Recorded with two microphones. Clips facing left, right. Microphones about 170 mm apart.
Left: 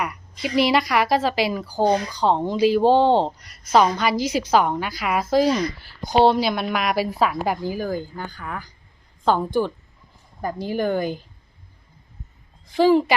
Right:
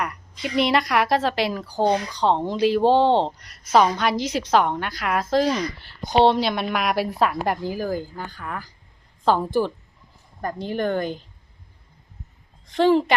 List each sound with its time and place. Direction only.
0.0 s a woman's voice: 5° left (ahead or behind)
12.7 s speech: 5° left (ahead or behind)